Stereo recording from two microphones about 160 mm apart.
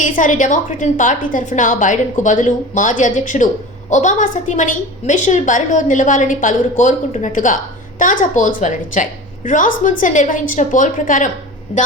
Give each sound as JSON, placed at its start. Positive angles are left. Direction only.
{"t": 0.0, "sound": "a woman's voice", "side_deg": 50}